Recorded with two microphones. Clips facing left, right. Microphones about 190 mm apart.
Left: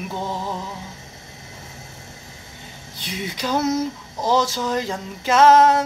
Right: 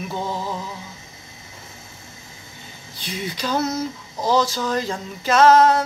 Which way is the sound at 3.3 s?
15° left (ahead or behind).